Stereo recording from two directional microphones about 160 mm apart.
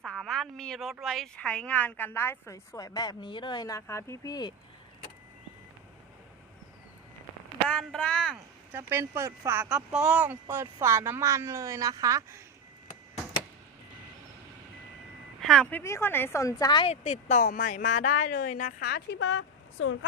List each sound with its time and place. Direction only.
0.0 s a sound: centre (ahead or behind)
1.0 s a woman's voice: 5° left (ahead or behind); by 4.5 s 25° left (ahead or behind)
7.7 s speech: 5° left (ahead or behind)
8.7 s speech: 15° right (ahead or behind)
15.4 s speech: 5° left (ahead or behind); by 16.9 s 25° left (ahead or behind)
16.9 s speech: 45° left (ahead or behind); by 19.2 s 85° left